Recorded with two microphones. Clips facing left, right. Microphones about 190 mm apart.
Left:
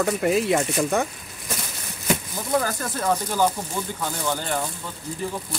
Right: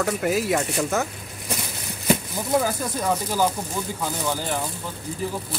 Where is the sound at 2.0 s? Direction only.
5° right (ahead or behind).